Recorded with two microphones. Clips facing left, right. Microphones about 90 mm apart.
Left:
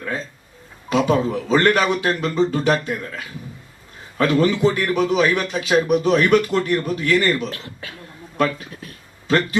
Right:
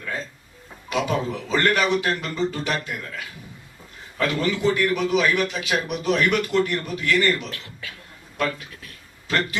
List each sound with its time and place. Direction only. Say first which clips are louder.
0.9 s a man's voice: left 6 dB; 40° left (ahead or behind)
4.2 s a man's voice: left 6 dB; 40° left (ahead or behind)
8.4 s a sound: left 5 dB; 35° left (ahead or behind)